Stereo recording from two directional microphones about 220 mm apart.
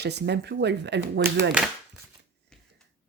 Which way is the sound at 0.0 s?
50° right (ahead or behind).